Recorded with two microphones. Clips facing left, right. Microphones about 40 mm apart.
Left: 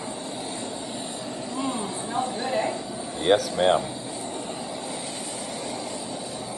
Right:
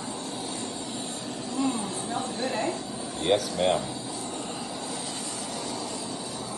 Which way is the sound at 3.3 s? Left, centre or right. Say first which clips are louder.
Left 4 dB; left.